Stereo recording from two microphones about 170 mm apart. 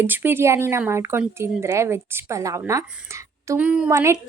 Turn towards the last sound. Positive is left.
turn(degrees=-20)  # may be behind; listen again after turning